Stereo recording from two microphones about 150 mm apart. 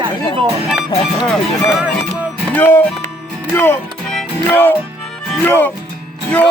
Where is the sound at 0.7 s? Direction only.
5° right (ahead or behind).